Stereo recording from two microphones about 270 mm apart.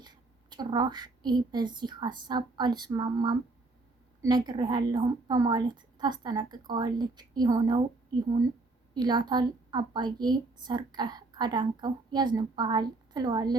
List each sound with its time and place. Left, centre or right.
0.0 s a woman's voice: centre